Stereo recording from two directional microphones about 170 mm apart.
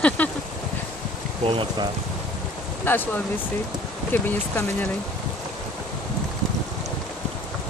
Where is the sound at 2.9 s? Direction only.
10° left (ahead or behind).